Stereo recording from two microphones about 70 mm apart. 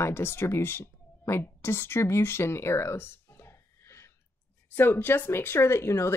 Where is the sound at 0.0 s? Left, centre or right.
Left.